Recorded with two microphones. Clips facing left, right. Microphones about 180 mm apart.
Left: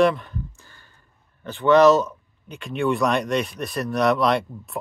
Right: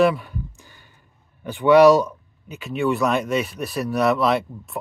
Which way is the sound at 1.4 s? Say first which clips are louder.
Right 2 dB; 10° right (ahead or behind).